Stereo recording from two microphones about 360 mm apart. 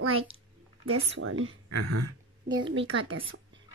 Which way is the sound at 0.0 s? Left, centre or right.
Right.